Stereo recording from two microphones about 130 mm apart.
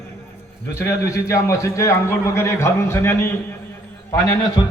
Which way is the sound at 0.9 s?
25° left (ahead or behind).